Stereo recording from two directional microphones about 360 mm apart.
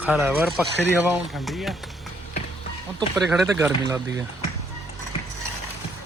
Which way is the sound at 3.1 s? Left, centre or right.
Centre.